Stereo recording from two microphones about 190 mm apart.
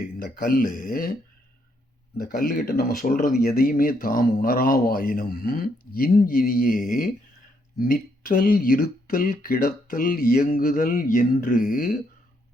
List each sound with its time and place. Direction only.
0.2 s speech: 50° left (ahead or behind)
2.4 s speech: 55° left (ahead or behind)